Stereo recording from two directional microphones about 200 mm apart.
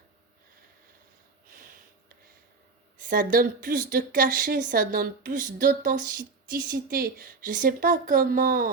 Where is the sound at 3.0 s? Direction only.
45° right (ahead or behind).